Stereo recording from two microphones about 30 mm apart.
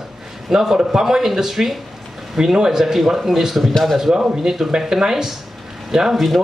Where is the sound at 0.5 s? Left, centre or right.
Centre.